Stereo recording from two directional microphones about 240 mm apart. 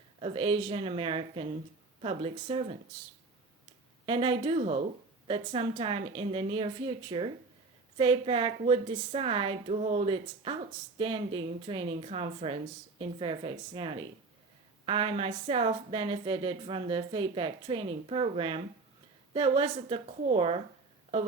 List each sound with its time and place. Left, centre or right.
0.2 s a woman's voice: right
4.0 s a woman's voice: right